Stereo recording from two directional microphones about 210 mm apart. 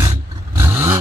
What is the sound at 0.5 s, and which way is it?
Vehicle, 10° right (ahead or behind).